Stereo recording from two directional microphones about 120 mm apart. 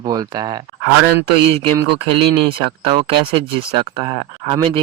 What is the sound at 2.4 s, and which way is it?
Speech, 45° right (ahead or behind).